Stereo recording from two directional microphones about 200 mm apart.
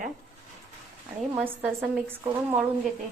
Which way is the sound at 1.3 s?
10° right (ahead or behind).